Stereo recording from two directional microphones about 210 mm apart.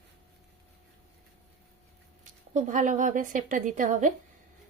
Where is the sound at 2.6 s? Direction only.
35° right (ahead or behind).